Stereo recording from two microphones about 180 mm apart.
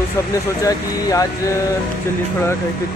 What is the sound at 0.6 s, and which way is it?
Speech, 20° left (ahead or behind).